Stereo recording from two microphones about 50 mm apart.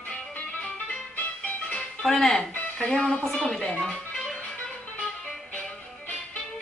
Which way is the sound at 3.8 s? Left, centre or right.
Centre.